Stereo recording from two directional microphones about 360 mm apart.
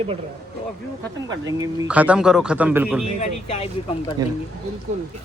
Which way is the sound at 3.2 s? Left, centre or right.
Centre.